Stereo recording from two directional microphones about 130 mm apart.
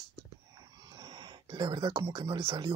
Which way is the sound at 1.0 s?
35° right (ahead or behind).